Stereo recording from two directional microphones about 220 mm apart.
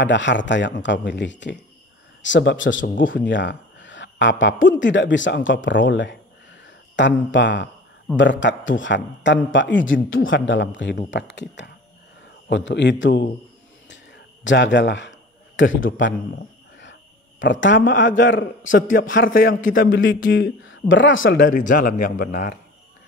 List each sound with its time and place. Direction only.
0.0 s a man's voice: 55° left (ahead or behind)
12.4 s a man's voice: 50° left (ahead or behind)
13.8 s a sound: 55° left (ahead or behind)
17.4 s speech: 55° left (ahead or behind)
21.5 s speech: 35° left (ahead or behind)